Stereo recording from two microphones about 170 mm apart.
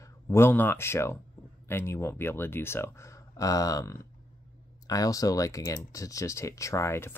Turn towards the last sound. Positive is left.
turn(degrees=15)  # may be behind; listen again after turning